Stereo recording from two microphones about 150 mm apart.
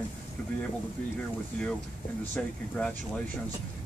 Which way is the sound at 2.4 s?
5° left (ahead or behind).